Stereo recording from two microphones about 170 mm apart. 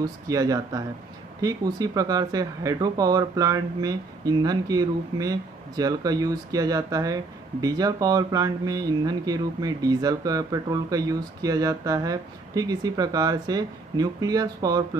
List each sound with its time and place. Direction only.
0.0 s speech: 20° right (ahead or behind)